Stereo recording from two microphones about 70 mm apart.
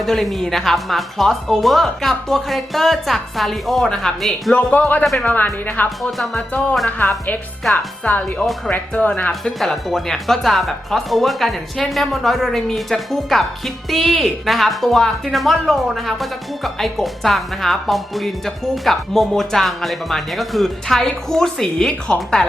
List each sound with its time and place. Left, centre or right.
0.0 s speech: centre
4.5 s speech: centre
6.0 s speech: centre
7.0 s speech: left
9.4 s speech: centre